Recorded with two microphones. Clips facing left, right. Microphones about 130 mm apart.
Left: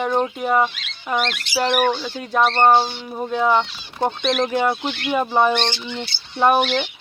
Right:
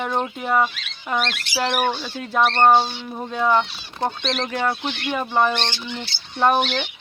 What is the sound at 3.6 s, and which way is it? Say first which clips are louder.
Speech: left 2 dB; 20° left (ahead or behind).